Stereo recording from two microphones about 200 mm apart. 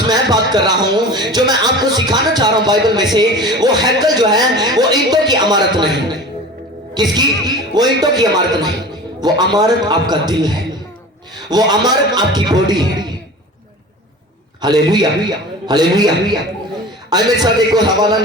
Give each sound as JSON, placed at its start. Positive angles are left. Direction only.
{"t": 0.1, "sound": "speech", "side_deg": -20}
{"t": 6.9, "sound": "speech", "side_deg": -20}
{"t": 14.6, "sound": "speech", "side_deg": -20}